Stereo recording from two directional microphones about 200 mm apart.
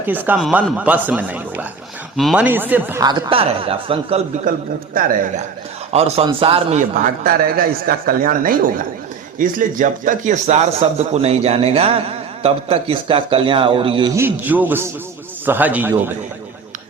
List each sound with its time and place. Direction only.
0.0 s speech: 10° right (ahead or behind); by 4.2 s 30° right (ahead or behind)
5.9 s a man's voice: 30° right (ahead or behind)
14.2 s speech: 10° right (ahead or behind)